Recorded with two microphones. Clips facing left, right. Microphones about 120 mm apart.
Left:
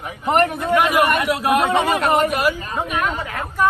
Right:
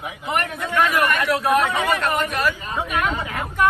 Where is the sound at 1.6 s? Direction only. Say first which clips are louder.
Left 3 dB; 30° left (ahead or behind).